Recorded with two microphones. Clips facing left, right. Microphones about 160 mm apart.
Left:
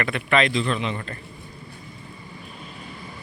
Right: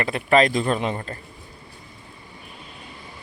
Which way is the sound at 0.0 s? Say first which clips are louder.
Right 3 dB; 35° right (ahead or behind).